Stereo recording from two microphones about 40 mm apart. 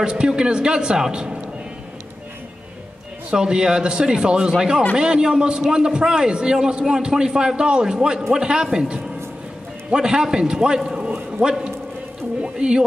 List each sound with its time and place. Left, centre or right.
0.0 s a man's voice: right
3.3 s a man's voice: centre
9.8 s a man's voice: centre
10.9 s a sound: right
11.3 s a man's voice: centre